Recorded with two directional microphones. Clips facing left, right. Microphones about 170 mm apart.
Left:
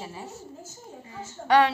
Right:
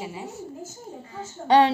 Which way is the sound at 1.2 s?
30° right (ahead or behind).